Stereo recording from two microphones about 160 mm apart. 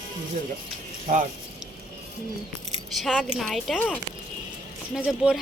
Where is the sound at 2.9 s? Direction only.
Centre (ahead or behind).